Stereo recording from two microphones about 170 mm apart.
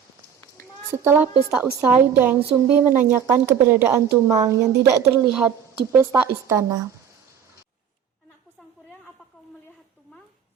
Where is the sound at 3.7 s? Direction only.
10° right (ahead or behind).